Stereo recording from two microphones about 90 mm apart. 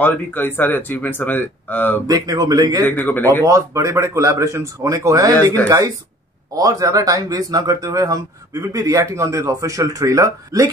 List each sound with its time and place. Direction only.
0.0 s speech: 20° left (ahead or behind)
2.0 s speech: 40° right (ahead or behind)
2.8 s speech: 20° left (ahead or behind)
3.4 s speech: 35° right (ahead or behind)